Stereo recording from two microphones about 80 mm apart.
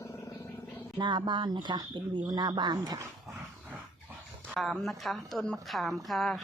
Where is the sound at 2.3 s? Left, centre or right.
Right.